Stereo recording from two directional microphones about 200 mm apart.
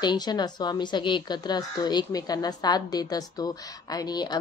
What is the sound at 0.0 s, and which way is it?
A woman's voice, 20° left (ahead or behind).